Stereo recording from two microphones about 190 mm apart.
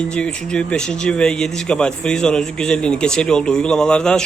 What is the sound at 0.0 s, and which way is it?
Speech, 5° left (ahead or behind).